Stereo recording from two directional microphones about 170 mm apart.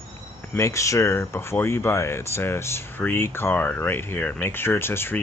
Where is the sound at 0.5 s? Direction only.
15° left (ahead or behind).